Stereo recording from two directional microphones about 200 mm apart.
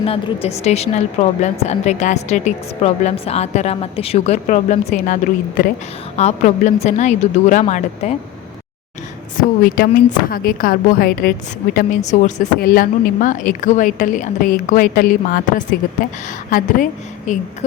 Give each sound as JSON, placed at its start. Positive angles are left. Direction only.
{"t": 0.0, "sound": "a woman's voice", "side_deg": 30}
{"t": 9.4, "sound": "a woman's voice", "side_deg": 45}